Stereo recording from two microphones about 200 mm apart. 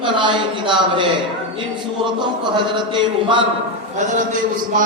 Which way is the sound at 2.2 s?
25° right (ahead or behind).